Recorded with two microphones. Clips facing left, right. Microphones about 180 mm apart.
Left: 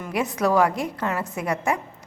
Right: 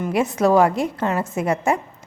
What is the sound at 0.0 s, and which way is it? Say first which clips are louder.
A woman's voice: right 5 dB; 25° right (ahead or behind).